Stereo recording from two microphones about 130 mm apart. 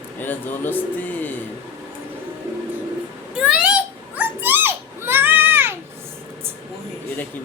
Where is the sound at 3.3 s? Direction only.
10° right (ahead or behind).